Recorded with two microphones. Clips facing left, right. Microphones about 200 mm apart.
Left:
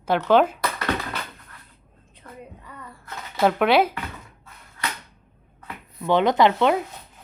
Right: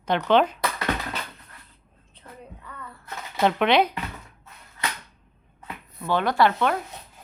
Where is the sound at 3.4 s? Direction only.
5° left (ahead or behind).